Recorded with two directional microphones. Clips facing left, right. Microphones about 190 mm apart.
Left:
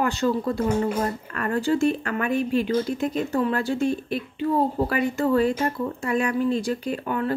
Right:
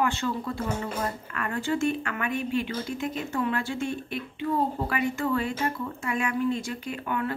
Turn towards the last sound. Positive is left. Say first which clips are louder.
# left 4 dB
turn(degrees=35)  # may be behind; listen again after turning